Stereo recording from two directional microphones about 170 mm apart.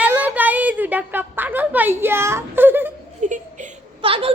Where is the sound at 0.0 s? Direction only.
10° right (ahead or behind).